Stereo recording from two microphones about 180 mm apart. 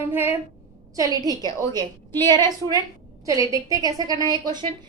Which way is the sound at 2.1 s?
15° left (ahead or behind).